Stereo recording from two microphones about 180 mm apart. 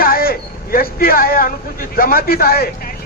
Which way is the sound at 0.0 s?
55° left (ahead or behind).